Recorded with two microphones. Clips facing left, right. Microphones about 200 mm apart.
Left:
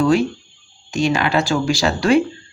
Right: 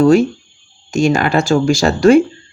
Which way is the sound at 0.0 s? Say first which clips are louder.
Right 6 dB; 45° right (ahead or behind).